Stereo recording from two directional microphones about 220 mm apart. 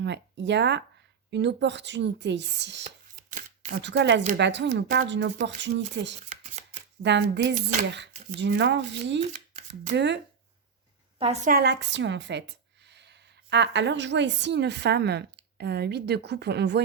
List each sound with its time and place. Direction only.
0.0 s speech: 50° right (ahead or behind)
2.8 s chopping: 35° right (ahead or behind)
3.8 s speech: 55° right (ahead or behind)
6.2 s speech: 35° right (ahead or behind)
7.0 s speech: 50° right (ahead or behind)
9.2 s a sound: 30° right (ahead or behind)
9.9 s speech: 50° right (ahead or behind)
11.2 s speech: 30° right (ahead or behind); by 16.8 s 50° right (ahead or behind)